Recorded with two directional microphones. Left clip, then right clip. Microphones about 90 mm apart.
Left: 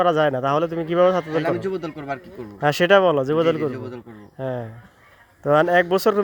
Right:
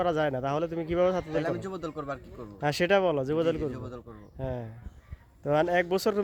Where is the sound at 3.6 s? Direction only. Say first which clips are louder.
Left 8 dB; 45° right (ahead or behind).